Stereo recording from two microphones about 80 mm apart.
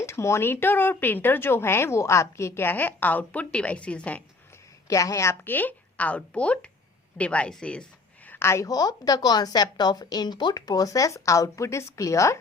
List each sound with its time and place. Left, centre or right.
0.0 s speech: left; by 4.2 s centre
4.9 s a woman's voice: left; by 8.4 s centre
8.4 s a woman's voice: left
8.6 s a woman's voice: left